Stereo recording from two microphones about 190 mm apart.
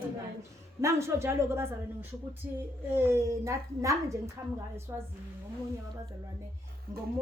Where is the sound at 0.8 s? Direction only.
15° right (ahead or behind).